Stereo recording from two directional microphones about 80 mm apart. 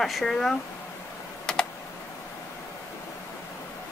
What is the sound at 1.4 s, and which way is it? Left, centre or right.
Computer keyboard, centre.